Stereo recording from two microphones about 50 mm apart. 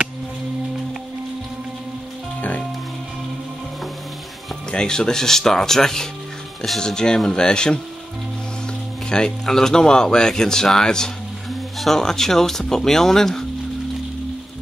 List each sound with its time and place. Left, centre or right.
4.6 s speech: centre
9.1 s speech: centre